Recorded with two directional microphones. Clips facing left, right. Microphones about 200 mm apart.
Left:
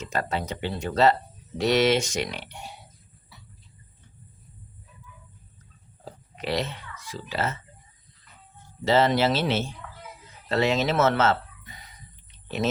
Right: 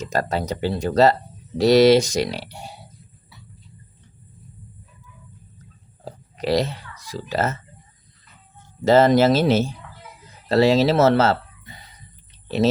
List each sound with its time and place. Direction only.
0.0 s speech: 40° right (ahead or behind)
6.1 s a sound: 40° right (ahead or behind)
8.8 s speech: 45° right (ahead or behind); by 11.9 s 30° right (ahead or behind)